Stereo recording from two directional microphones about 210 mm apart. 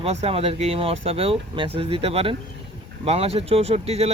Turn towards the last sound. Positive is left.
turn(degrees=-30)  # may be behind; listen again after turning